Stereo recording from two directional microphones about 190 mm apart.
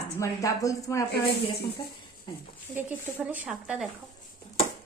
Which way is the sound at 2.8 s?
10° right (ahead or behind).